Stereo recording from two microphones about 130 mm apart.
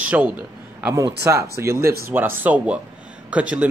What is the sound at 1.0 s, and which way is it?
Speech, 25° right (ahead or behind).